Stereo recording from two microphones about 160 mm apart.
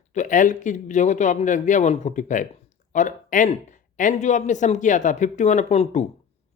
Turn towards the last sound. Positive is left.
turn(degrees=45)  # may be behind; listen again after turning